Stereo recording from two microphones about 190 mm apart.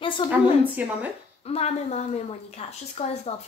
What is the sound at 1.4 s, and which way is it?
A woman's voice, 30° left (ahead or behind).